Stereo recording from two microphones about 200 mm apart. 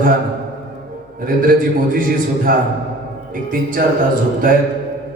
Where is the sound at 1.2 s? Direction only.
45° right (ahead or behind).